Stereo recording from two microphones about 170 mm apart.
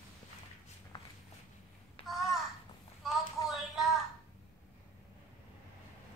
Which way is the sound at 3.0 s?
Centre (ahead or behind).